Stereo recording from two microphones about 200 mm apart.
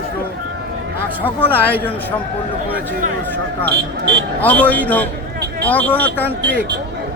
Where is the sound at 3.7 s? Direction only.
55° right (ahead or behind).